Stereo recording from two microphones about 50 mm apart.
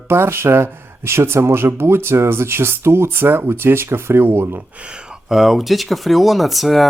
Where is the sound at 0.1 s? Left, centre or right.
Right.